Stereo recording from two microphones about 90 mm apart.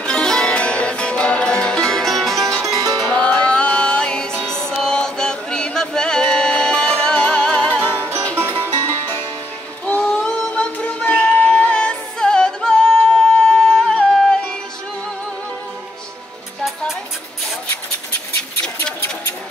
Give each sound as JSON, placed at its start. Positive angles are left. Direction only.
{"t": 0.0, "sound": "music", "side_deg": 10}
{"t": 2.6, "sound": "music", "side_deg": -40}
{"t": 3.1, "sound": "music", "side_deg": 15}
{"t": 4.6, "sound": "chant", "side_deg": 10}
{"t": 8.0, "sound": "music", "side_deg": -30}
{"t": 9.8, "sound": "singing", "side_deg": 15}